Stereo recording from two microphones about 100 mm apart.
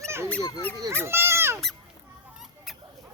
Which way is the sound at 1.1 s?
25° right (ahead or behind).